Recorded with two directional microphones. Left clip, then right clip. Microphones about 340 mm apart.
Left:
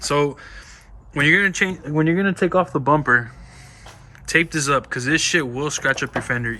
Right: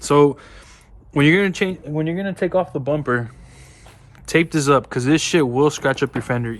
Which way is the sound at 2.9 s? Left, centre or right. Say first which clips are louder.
Left 5 dB; centre.